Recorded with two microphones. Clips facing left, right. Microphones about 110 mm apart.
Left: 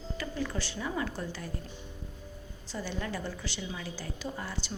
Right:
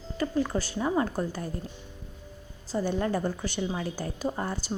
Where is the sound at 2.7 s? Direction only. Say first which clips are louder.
Right 9 dB; 45° right (ahead or behind).